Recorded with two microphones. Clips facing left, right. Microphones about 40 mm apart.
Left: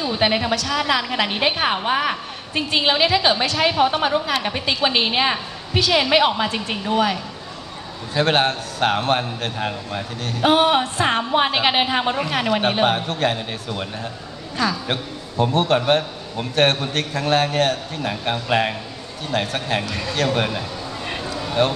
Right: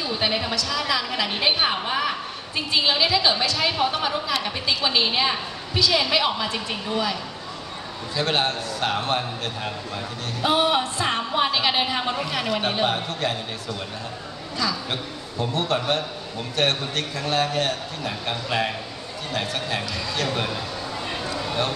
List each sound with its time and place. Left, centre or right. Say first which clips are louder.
0.0 s a woman's voice: left 5 dB; left
8.1 s a woman's voice: left 5 dB; left
9.6 s a woman's voice: left 4 dB; left
10.2 s a woman's voice: left 5 dB; left
14.9 s a man's voice: left 4 dB; left
18.2 s a woman's voice: left 5 dB; left
19.3 s a woman's voice: left 5 dB; left
21.3 s a sound: left 1 dB; centre